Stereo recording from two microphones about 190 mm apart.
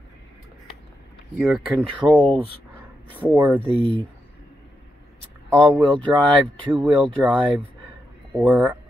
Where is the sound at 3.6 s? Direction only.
30° right (ahead or behind).